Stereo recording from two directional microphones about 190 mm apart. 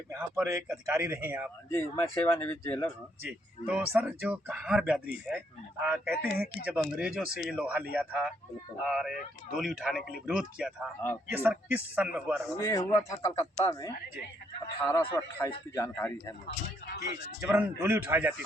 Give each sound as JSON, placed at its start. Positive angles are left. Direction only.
{"t": 0.1, "sound": "a man's voice", "side_deg": -15}
{"t": 1.7, "sound": "speech", "side_deg": 10}
{"t": 3.2, "sound": "a man's voice", "side_deg": -5}
{"t": 12.5, "sound": "speech", "side_deg": 15}
{"t": 16.5, "sound": "speech", "side_deg": 55}
{"t": 17.0, "sound": "a man's voice", "side_deg": -15}